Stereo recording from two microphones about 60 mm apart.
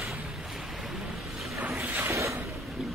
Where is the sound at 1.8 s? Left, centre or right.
Right.